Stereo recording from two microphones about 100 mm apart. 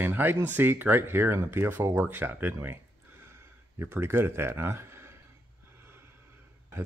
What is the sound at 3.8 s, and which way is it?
Speech, 25° right (ahead or behind).